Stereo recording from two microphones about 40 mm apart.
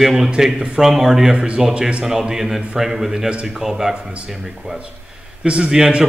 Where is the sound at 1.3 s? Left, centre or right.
Right.